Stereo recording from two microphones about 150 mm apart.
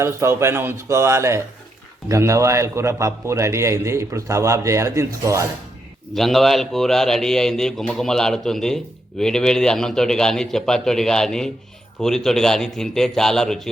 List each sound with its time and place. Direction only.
0.0 s a man's voice: 20° right (ahead or behind)
6.1 s speech: centre (ahead or behind)